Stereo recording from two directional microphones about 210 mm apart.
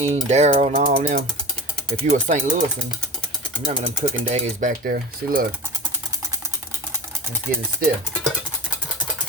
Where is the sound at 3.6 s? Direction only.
30° right (ahead or behind).